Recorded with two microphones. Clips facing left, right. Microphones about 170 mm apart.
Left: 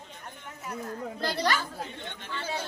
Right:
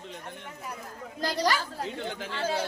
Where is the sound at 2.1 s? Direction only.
90° right.